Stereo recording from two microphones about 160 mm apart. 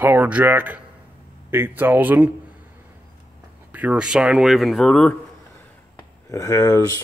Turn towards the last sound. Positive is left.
turn(degrees=20)  # may be behind; listen again after turning